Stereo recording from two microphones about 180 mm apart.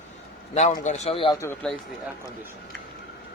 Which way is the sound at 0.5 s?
40° left (ahead or behind).